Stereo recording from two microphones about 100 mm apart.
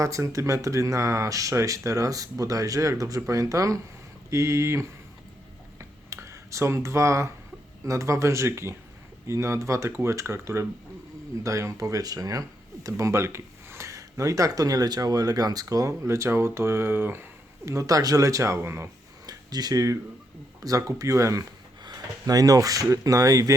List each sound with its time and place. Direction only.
0.0 s speech: 35° right (ahead or behind)
6.1 s speech: 30° right (ahead or behind)
17.7 s speech: 35° right (ahead or behind)
19.2 s a sound: 40° right (ahead or behind)
20.6 s speech: 35° right (ahead or behind)